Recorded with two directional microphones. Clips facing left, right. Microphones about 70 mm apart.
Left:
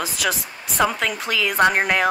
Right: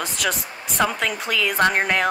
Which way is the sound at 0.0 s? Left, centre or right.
Centre.